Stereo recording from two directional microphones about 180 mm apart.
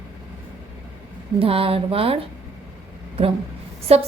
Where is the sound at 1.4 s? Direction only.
30° right (ahead or behind).